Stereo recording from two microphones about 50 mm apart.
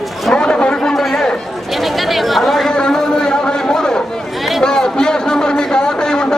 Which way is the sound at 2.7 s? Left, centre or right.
Centre.